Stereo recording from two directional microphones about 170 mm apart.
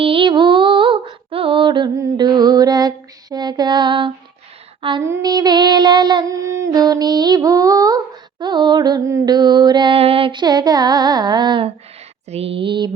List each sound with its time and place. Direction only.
0.0 s female singing: 30° right (ahead or behind)
4.8 s speech: 30° right (ahead or behind)
5.0 s a sound: 20° right (ahead or behind)